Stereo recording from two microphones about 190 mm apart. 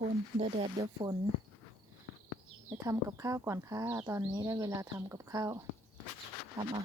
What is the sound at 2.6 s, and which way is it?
Speech, 15° right (ahead or behind).